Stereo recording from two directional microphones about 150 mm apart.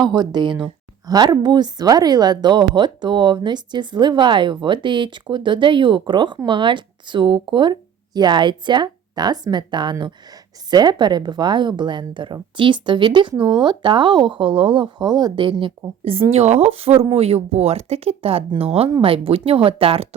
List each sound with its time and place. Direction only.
0.1 s speech: 30° right (ahead or behind)
13.3 s speech: 10° right (ahead or behind)
13.6 s speech: 30° right (ahead or behind)